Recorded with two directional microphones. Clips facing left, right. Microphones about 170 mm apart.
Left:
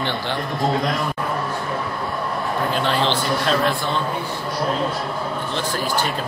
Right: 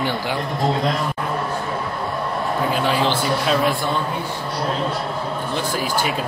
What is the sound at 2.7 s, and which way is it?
A man's voice, 5° right (ahead or behind).